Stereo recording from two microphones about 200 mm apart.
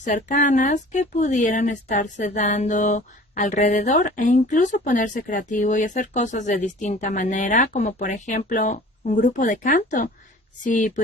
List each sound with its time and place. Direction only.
0.0 s speech: 40° left (ahead or behind)